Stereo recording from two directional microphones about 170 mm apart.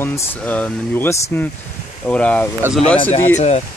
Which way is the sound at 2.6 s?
10° right (ahead or behind).